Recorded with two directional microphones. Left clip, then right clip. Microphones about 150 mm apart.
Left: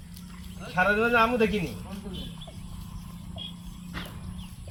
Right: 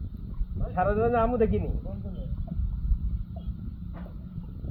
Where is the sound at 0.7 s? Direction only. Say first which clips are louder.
Left 2 dB; centre (ahead or behind).